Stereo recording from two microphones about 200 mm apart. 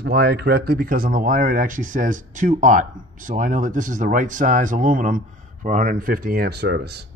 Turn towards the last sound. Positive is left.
turn(degrees=-55)  # may be behind; listen again after turning